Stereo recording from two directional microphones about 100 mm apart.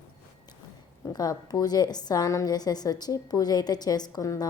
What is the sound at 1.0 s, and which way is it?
A woman's voice, 40° left (ahead or behind).